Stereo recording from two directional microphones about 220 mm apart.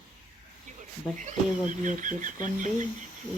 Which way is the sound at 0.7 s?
35° right (ahead or behind).